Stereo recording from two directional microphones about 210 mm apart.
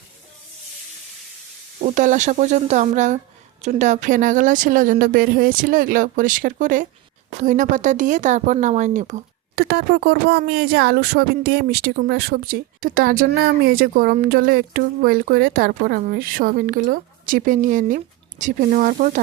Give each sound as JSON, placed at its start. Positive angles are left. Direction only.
{"t": 1.8, "sound": "a woman's voice", "side_deg": -35}